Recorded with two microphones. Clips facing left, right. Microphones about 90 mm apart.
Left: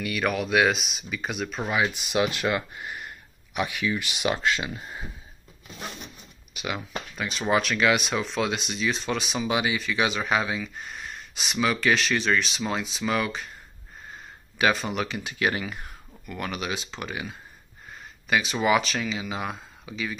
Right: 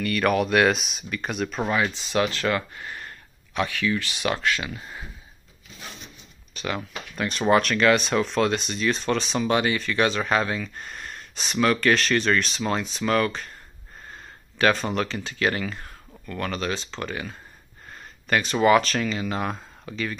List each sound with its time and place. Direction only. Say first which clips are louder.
0.0 s speech: right 5 dB; 5° left (ahead or behind)
1.8 s speech: left 2 dB; 15° left (ahead or behind)
6.5 s speech: right 2 dB; 10° left (ahead or behind)
14.6 s speech: right 2 dB; 5° left (ahead or behind)